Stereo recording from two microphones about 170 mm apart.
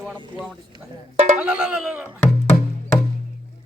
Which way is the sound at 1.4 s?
5° right (ahead or behind).